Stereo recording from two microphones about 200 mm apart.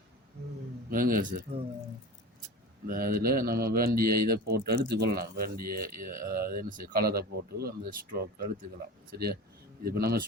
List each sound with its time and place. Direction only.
0.9 s speech: 45° right (ahead or behind)
2.8 s speech: 50° right (ahead or behind)